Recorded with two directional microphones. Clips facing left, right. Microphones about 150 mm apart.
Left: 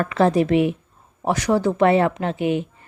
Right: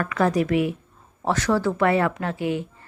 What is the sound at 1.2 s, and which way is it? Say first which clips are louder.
Speech: left 2 dB; 15° left (ahead or behind).